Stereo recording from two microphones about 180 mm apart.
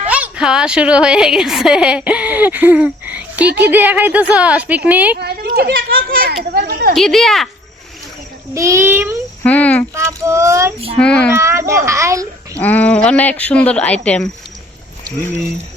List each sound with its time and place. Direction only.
0.1 s a woman's voice: 5° right (ahead or behind)
5.2 s a sound: 60° right (ahead or behind)
6.9 s speech: centre (ahead or behind)
8.5 s a woman's voice: 15° right (ahead or behind)
9.4 s speech: 10° left (ahead or behind)
9.9 s a woman's voice: 15° right (ahead or behind)
11.0 s speech: 5° left (ahead or behind)
11.3 s a woman's voice: 15° right (ahead or behind)
12.5 s speech: 10° left (ahead or behind)